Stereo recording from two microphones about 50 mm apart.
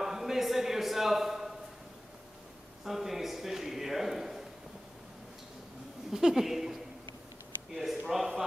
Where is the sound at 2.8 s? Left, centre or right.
Centre.